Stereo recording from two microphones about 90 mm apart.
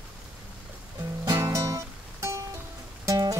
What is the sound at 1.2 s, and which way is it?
Music, 35° right (ahead or behind).